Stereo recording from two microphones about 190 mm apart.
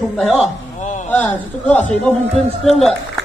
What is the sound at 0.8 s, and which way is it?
Speech, 40° left (ahead or behind).